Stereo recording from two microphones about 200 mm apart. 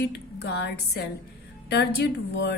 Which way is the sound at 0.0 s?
55° left (ahead or behind).